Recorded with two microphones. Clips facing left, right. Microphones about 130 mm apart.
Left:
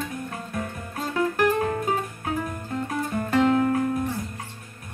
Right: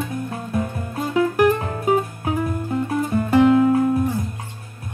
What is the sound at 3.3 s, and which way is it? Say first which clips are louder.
Music: right 6 dB; 10° right (ahead or behind).